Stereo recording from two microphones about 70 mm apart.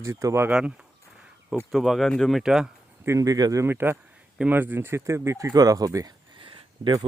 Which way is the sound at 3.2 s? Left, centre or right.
Right.